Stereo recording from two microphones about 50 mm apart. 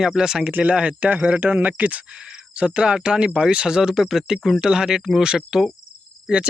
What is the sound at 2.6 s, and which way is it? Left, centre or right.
Speech, centre.